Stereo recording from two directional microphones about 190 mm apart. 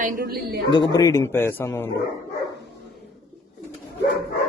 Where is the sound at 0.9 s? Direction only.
15° left (ahead or behind).